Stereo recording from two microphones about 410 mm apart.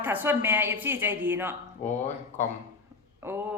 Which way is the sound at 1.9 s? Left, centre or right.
Centre.